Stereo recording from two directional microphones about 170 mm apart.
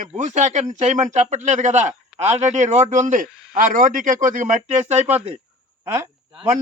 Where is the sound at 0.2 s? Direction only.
45° right (ahead or behind).